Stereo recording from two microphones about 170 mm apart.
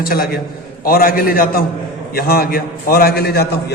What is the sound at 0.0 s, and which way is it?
A man's voice, 65° left (ahead or behind).